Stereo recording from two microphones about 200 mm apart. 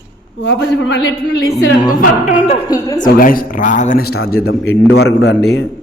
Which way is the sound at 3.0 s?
45° left (ahead or behind).